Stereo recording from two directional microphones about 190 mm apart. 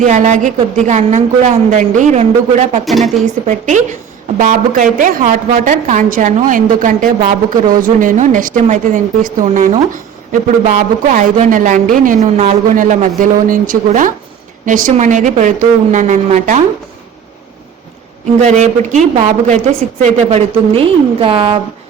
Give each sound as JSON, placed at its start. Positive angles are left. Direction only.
{"t": 0.0, "sound": "a woman's voice", "side_deg": -40}
{"t": 2.8, "sound": "speech", "side_deg": 0}
{"t": 3.4, "sound": "a woman's voice", "side_deg": -40}
{"t": 18.4, "sound": "a woman's voice", "side_deg": -40}